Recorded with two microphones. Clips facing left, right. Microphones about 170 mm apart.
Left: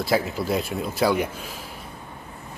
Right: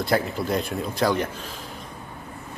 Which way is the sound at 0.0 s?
5° left (ahead or behind).